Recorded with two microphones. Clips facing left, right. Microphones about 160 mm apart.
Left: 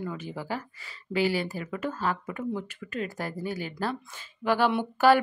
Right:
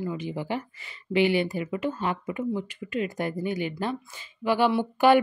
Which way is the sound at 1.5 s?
20° right (ahead or behind).